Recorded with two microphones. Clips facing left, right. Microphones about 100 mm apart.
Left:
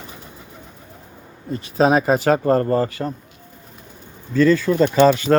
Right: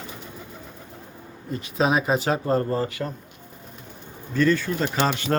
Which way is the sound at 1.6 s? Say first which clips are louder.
Left 6 dB; 40° left (ahead or behind).